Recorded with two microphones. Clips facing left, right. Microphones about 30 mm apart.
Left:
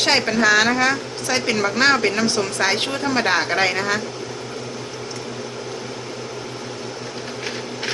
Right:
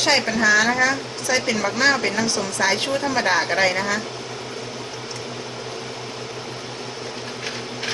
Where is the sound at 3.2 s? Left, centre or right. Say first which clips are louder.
Even; left.